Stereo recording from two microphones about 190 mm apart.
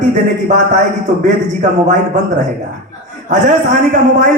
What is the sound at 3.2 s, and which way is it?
Speech, 40° right (ahead or behind).